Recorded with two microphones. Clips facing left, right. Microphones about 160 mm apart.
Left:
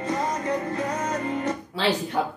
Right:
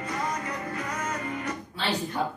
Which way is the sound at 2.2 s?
90° left.